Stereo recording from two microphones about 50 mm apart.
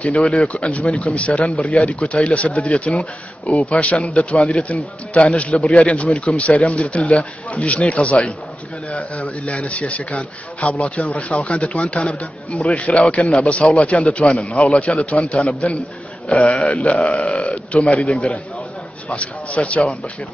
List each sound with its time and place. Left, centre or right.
0.0 s a man's voice: left
12.2 s a man's voice: left
12.7 s a man's voice: left
19.0 s a man's voice: left